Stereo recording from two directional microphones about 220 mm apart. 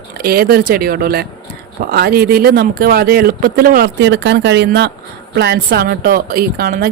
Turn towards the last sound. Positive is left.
turn(degrees=-40)  # may be behind; listen again after turning